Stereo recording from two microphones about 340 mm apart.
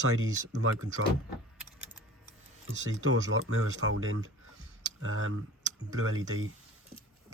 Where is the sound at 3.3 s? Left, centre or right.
Right.